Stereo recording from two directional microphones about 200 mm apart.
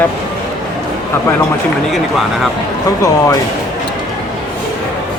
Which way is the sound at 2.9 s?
15° left (ahead or behind).